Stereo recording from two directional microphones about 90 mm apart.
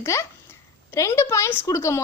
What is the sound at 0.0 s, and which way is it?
A woman's voice, 30° left (ahead or behind).